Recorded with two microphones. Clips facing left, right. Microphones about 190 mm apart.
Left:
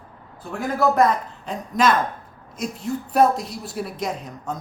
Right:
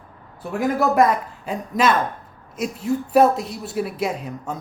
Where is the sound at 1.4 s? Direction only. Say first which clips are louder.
Even; 5° right (ahead or behind).